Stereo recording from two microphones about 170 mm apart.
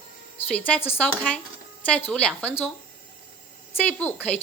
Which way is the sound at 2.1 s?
10° left (ahead or behind).